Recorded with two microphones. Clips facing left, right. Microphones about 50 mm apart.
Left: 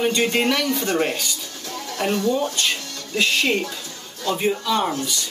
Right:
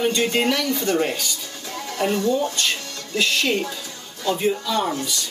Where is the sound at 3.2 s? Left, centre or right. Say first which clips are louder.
Left 1 dB; centre.